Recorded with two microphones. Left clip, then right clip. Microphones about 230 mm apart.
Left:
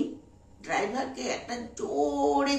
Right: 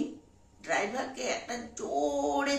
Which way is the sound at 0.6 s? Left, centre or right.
Centre.